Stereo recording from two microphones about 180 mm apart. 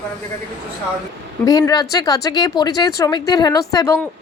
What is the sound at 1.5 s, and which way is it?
A woman's voice, 20° left (ahead or behind).